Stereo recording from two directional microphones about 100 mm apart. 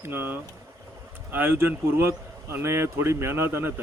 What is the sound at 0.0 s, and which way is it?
A man's voice, 20° right (ahead or behind).